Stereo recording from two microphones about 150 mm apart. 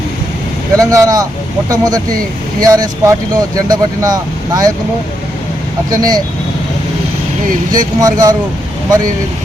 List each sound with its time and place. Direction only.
0.8 s speech: 20° right (ahead or behind)
5.9 s speech: 25° right (ahead or behind)
7.7 s speech: 25° right (ahead or behind)